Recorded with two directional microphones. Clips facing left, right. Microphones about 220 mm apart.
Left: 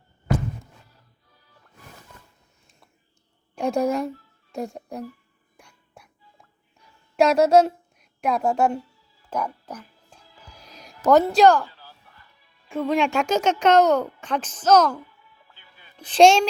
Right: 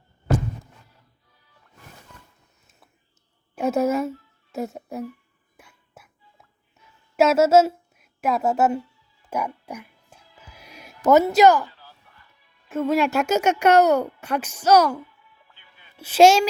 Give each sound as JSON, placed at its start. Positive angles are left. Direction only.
{"t": 3.5, "sound": "a woman's voice", "side_deg": -5}
{"t": 5.5, "sound": "music", "side_deg": -5}
{"t": 7.2, "sound": "a woman's voice", "side_deg": -5}
{"t": 9.6, "sound": "music", "side_deg": -10}
{"t": 11.4, "sound": "speech", "side_deg": -5}
{"t": 11.7, "sound": "chop", "side_deg": 35}
{"t": 12.6, "sound": "speech", "side_deg": -5}
{"t": 15.3, "sound": "music", "side_deg": 35}
{"t": 16.0, "sound": "speech", "side_deg": -5}